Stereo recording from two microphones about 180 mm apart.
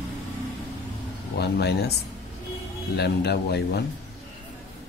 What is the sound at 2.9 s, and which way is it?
Speech, 65° left (ahead or behind).